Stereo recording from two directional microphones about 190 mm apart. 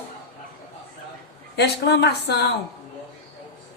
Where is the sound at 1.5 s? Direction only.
60° left (ahead or behind).